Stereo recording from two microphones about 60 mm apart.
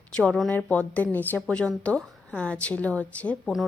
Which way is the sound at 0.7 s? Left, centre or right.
Left.